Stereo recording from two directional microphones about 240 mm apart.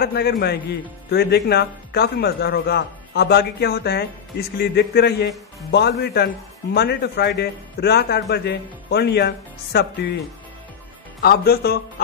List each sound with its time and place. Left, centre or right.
0.0 s a man's voice: left
11.1 s a man's voice: left